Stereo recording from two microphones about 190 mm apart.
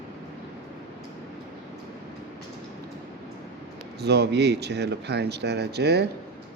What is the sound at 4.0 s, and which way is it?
Speech, 60° right (ahead or behind).